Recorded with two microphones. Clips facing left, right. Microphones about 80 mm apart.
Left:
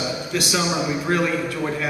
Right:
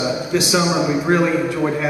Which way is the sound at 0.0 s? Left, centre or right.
Centre.